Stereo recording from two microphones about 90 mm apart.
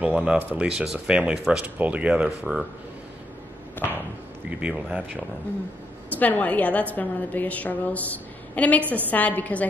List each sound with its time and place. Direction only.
0.0 s speech: 15° right (ahead or behind)
3.8 s a sound: 25° left (ahead or behind)
4.5 s speech: 15° right (ahead or behind)
6.0 s a woman's voice: 20° left (ahead or behind)
8.8 s a woman's voice: 20° right (ahead or behind)
9.1 s a woman's voice: 15° left (ahead or behind)